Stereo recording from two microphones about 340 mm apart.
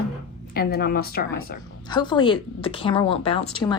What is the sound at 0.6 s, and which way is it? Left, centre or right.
Speech, left.